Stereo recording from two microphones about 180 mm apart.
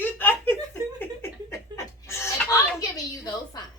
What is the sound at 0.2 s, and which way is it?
Laughter, 10° left (ahead or behind).